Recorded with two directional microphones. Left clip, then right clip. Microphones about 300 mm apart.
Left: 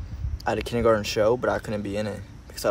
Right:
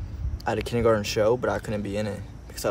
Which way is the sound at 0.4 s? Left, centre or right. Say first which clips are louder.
Even; centre.